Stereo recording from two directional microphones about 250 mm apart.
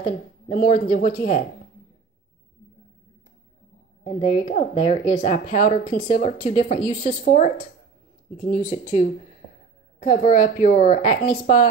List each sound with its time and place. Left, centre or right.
0.0 s speech: left
4.0 s speech: left